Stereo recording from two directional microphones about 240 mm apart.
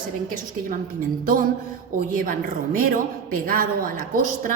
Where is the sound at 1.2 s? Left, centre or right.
Right.